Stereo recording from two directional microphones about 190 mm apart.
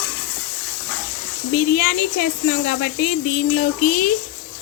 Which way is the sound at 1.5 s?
50° left (ahead or behind).